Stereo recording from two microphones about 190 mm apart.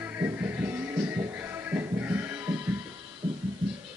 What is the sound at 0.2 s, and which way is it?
Music, 10° right (ahead or behind).